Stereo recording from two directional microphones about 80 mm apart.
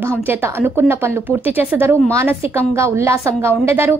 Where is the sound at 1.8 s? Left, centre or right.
Right.